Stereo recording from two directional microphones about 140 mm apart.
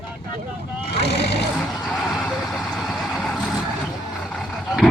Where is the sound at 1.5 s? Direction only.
Centre (ahead or behind).